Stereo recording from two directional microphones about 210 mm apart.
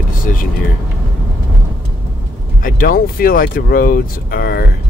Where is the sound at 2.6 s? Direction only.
40° left (ahead or behind).